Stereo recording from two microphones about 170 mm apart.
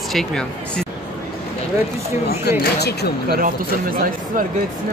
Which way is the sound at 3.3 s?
55° right (ahead or behind).